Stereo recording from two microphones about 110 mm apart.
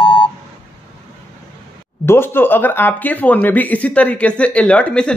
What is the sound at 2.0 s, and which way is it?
Speech, 20° left (ahead or behind).